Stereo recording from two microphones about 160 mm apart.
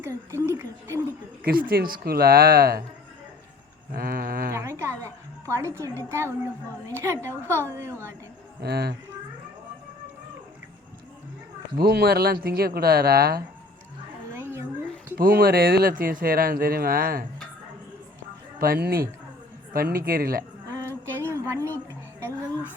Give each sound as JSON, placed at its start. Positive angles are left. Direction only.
{"t": 0.0, "sound": "a woman's voice", "side_deg": -15}
{"t": 1.5, "sound": "speech", "side_deg": -65}
{"t": 3.9, "sound": "speech", "side_deg": -65}
{"t": 4.5, "sound": "a woman's voice", "side_deg": -15}
{"t": 8.6, "sound": "a woman's voice", "side_deg": -85}
{"t": 11.8, "sound": "speech", "side_deg": -75}
{"t": 14.3, "sound": "a sound", "side_deg": -15}
{"t": 15.4, "sound": "speech", "side_deg": -70}
{"t": 18.6, "sound": "speech", "side_deg": -70}
{"t": 20.7, "sound": "a sound", "side_deg": -15}